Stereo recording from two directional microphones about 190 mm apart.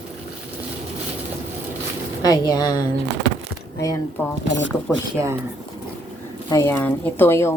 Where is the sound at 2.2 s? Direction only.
20° left (ahead or behind).